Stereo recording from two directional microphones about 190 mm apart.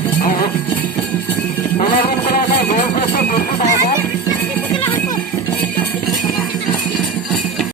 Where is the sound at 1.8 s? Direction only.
55° left (ahead or behind).